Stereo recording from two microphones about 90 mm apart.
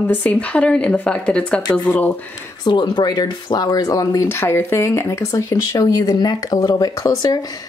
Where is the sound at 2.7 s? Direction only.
55° left (ahead or behind).